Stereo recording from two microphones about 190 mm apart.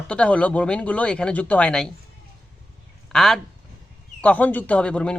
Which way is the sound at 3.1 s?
Centre (ahead or behind).